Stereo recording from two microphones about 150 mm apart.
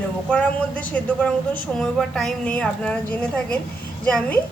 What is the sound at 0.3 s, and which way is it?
A woman's voice, 10° left (ahead or behind).